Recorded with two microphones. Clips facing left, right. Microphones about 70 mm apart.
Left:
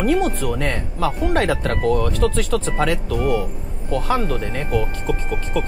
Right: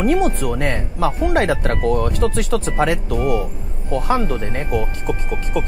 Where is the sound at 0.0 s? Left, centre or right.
Centre.